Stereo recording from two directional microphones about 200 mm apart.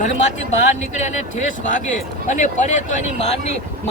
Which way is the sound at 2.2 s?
40° left (ahead or behind).